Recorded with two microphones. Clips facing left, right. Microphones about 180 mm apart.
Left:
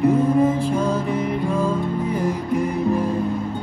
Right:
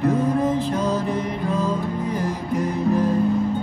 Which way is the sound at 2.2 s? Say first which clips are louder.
Left 2 dB; 10° left (ahead or behind).